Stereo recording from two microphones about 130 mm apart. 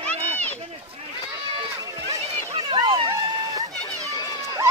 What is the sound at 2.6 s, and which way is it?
Run, 40° right (ahead or behind).